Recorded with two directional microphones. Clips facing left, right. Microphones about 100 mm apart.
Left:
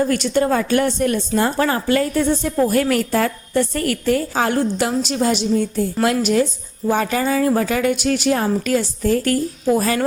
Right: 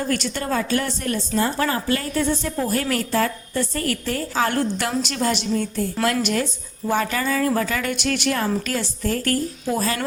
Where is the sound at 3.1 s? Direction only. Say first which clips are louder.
Left 4 dB; 45° left (ahead or behind).